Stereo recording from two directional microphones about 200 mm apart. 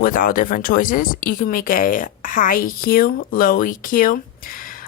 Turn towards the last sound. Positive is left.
turn(degrees=45)  # may be behind; listen again after turning